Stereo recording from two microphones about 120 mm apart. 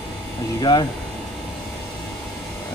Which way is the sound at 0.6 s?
35° left (ahead or behind).